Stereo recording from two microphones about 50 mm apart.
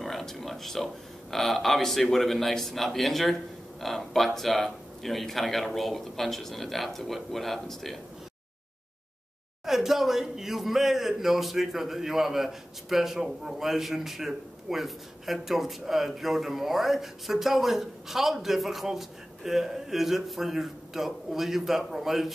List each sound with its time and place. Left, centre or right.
0.0 s a sound: centre
1.3 s speech: centre
9.7 s speech: centre